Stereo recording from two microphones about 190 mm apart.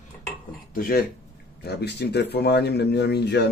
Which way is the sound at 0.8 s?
50° left (ahead or behind).